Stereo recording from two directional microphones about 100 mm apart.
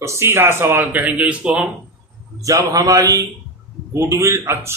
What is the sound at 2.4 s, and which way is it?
Speech, 35° right (ahead or behind).